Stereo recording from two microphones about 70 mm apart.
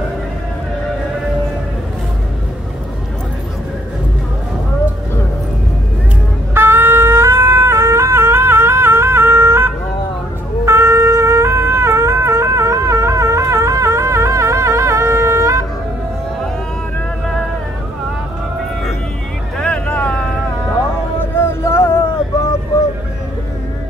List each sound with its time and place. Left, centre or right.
6.5 s shofar: right
19.5 s vehicle: centre
21.6 s a sound: left